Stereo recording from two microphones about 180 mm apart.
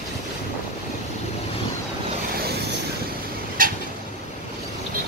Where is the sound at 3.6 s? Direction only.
50° right (ahead or behind).